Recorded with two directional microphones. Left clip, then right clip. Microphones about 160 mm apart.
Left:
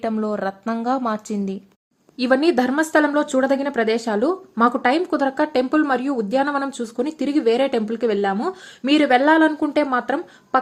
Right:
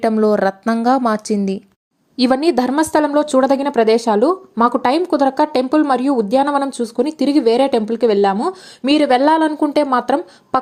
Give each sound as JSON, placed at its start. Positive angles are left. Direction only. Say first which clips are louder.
{"t": 0.2, "sound": "speech", "louder": "right 9 dB", "side_deg": -40}
{"t": 9.9, "sound": "speech", "louder": "right 6 dB", "side_deg": -25}